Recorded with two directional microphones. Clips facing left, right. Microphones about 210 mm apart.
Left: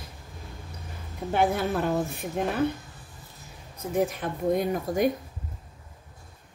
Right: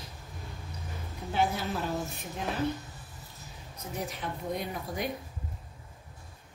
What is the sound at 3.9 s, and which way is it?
A woman's voice, 50° left (ahead or behind).